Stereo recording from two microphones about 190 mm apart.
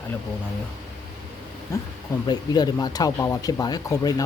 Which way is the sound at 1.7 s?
15° left (ahead or behind).